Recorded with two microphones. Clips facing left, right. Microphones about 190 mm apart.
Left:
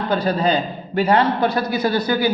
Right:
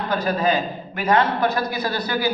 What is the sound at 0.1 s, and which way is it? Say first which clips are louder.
A man's voice: left 2 dB; 30° left (ahead or behind).